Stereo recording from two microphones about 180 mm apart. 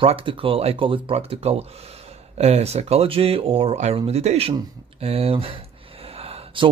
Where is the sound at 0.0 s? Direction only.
30° right (ahead or behind).